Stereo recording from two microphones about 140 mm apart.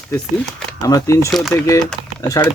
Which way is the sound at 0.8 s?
25° left (ahead or behind).